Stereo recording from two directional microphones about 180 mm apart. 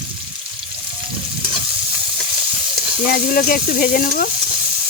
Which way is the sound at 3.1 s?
55° left (ahead or behind).